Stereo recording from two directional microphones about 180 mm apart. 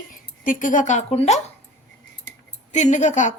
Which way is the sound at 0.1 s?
45° left (ahead or behind).